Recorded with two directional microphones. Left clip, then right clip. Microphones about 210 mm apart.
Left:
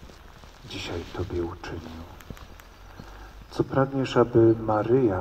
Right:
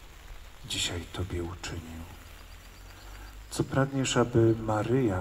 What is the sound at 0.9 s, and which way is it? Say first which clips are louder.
Speech: left 5 dB; 40° right (ahead or behind).